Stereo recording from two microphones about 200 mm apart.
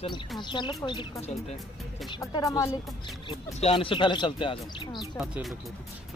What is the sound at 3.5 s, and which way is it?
Speech, 30° left (ahead or behind).